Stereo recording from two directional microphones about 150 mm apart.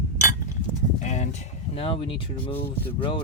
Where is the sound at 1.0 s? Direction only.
50° left (ahead or behind).